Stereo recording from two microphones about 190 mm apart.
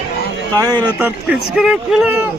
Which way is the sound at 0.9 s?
5° right (ahead or behind).